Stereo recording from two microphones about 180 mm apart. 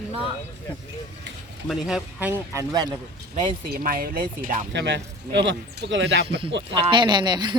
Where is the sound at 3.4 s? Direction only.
50° right (ahead or behind).